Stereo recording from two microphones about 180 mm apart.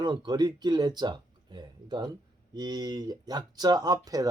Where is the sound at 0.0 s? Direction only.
25° right (ahead or behind).